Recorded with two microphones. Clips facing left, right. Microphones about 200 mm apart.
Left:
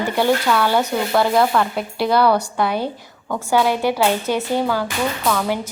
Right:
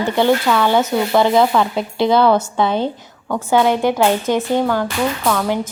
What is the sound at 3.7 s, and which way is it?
Speech, 20° right (ahead or behind).